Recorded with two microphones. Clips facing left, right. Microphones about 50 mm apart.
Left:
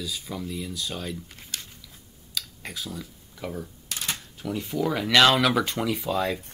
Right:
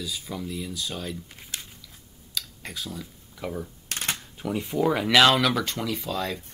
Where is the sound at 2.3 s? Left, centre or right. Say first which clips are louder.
Even; centre.